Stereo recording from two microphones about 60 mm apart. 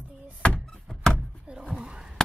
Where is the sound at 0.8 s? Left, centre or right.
Centre.